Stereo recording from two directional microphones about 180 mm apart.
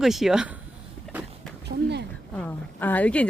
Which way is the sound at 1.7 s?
70° right (ahead or behind).